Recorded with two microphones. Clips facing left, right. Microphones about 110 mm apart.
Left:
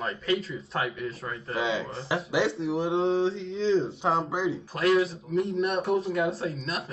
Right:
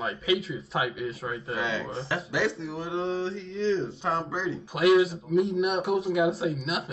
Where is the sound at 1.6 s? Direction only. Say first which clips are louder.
Left 4 dB; 20° left (ahead or behind).